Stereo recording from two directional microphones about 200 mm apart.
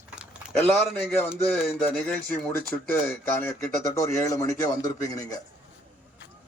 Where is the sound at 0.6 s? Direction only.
10° left (ahead or behind).